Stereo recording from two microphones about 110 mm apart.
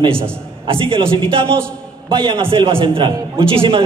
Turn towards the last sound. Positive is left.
turn(degrees=-55)  # may be behind; listen again after turning